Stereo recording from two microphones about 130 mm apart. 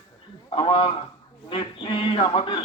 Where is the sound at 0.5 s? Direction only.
45° left (ahead or behind).